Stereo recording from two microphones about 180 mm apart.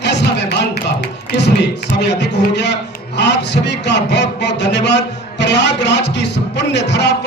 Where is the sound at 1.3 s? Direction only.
75° left (ahead or behind).